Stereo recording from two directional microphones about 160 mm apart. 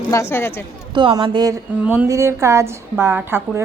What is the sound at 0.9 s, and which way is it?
Speech, 30° right (ahead or behind).